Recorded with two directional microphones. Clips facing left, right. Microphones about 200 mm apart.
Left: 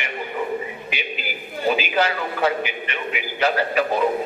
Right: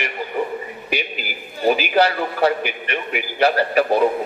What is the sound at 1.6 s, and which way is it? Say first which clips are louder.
A man's voice: right 4 dB; 40° right (ahead or behind).